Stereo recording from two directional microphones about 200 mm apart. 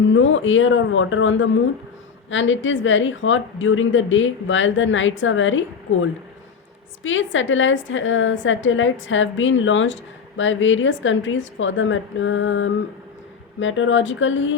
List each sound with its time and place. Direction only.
0.1 s a woman's voice: 70° left (ahead or behind)